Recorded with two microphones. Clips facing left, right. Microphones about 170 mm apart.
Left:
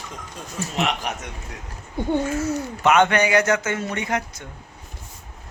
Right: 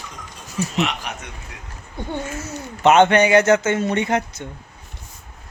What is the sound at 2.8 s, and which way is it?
Speech, 25° right (ahead or behind).